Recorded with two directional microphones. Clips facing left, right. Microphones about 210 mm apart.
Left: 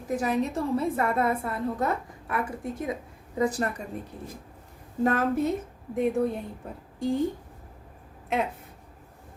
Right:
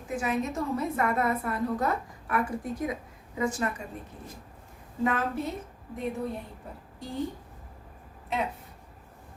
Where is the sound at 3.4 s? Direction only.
35° left (ahead or behind).